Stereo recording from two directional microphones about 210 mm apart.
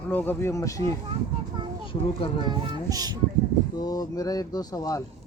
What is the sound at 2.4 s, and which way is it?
Child singing, 20° right (ahead or behind).